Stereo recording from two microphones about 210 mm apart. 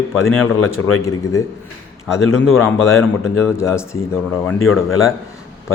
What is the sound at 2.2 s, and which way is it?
Speech, 75° left (ahead or behind).